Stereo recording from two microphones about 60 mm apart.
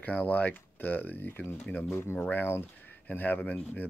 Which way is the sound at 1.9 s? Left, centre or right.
Left.